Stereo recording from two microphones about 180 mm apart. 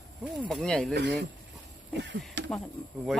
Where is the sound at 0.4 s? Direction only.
5° left (ahead or behind).